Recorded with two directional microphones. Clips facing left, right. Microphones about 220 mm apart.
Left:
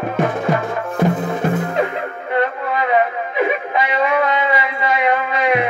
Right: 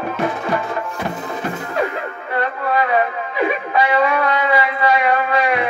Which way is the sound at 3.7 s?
20° left (ahead or behind).